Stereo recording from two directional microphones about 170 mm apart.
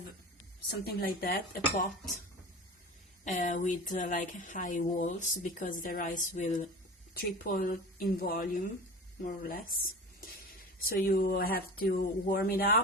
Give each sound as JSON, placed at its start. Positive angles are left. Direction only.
{"t": 0.7, "sound": "speech", "side_deg": 65}
{"t": 3.2, "sound": "speech", "side_deg": 45}